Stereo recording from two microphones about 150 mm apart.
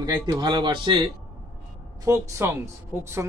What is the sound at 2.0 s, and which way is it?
Speech, 20° right (ahead or behind).